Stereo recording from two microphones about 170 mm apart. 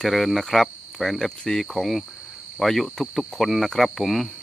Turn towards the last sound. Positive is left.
turn(degrees=0)  # may be behind; listen again after turning